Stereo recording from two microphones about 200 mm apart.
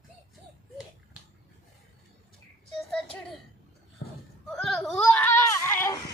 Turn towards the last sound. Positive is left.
turn(degrees=10)  # may be behind; listen again after turning